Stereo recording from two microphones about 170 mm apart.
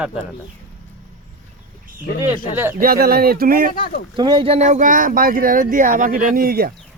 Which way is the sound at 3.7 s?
55° left (ahead or behind).